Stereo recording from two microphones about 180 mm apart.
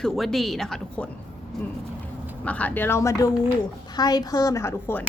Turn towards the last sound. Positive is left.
turn(degrees=15)  # may be behind; listen again after turning